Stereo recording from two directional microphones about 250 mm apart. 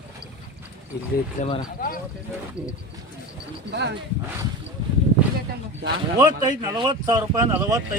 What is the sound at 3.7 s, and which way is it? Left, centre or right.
Speech, right.